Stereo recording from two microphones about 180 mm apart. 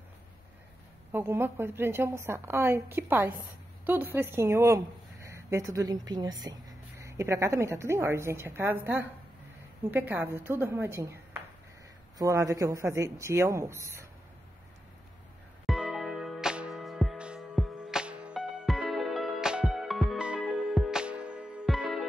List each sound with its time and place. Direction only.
1.1 s a woman's voice: 15° right (ahead or behind)
12.2 s a woman's voice: 20° right (ahead or behind)
15.6 s music: centre (ahead or behind)